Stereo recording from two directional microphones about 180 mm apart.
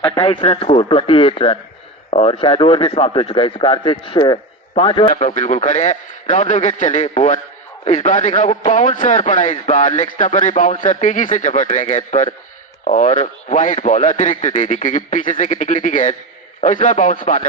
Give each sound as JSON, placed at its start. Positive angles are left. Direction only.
{"t": 0.1, "sound": "a man's voice", "side_deg": 30}
{"t": 5.1, "sound": "a man's voice", "side_deg": 45}